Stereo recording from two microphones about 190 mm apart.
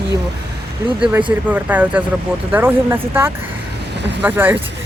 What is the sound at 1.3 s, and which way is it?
Speech, 10° right (ahead or behind).